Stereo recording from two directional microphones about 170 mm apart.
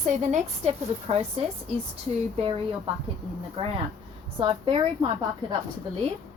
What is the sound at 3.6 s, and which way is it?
A woman's voice, 30° right (ahead or behind).